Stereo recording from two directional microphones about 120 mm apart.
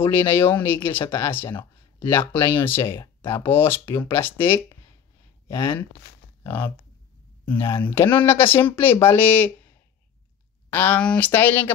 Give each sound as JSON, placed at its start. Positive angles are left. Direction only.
{"t": 0.0, "sound": "speech", "side_deg": 20}
{"t": 1.5, "sound": "a sound", "side_deg": 40}
{"t": 2.0, "sound": "speech", "side_deg": 20}
{"t": 6.4, "sound": "speech", "side_deg": 15}
{"t": 10.7, "sound": "speech", "side_deg": 15}